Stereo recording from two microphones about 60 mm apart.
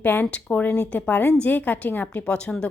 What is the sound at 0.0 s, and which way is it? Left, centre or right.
A woman's voice, left.